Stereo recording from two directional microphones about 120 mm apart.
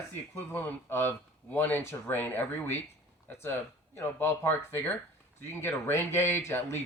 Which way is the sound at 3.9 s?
20° left (ahead or behind).